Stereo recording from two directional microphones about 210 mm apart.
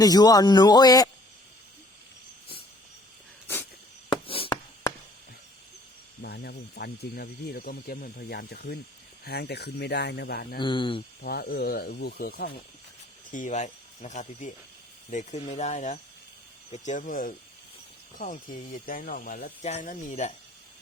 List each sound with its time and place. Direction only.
0.0 s a man's voice: 20° left (ahead or behind)
3.4 s a sound: 10° left (ahead or behind)
6.2 s speech: 50° left (ahead or behind)
10.6 s a man's voice: 25° left (ahead or behind)
11.2 s speech: 45° left (ahead or behind)